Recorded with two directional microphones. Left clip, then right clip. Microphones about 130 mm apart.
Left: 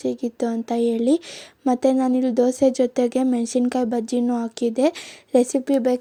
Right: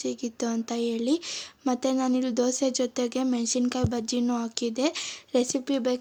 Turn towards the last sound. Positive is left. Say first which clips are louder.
# left 7 dB
turn(degrees=50)  # may be behind; listen again after turning